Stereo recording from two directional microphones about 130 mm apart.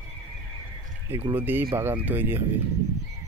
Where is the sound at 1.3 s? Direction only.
15° right (ahead or behind).